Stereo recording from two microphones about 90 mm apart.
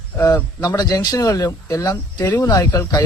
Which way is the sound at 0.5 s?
45° left (ahead or behind).